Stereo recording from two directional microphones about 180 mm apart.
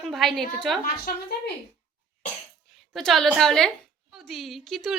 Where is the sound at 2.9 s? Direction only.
Centre (ahead or behind).